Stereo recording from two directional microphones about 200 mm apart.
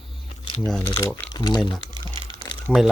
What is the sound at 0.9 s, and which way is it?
Speech, 15° left (ahead or behind).